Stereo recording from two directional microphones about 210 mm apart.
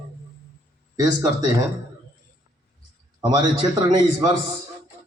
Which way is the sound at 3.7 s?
20° right (ahead or behind).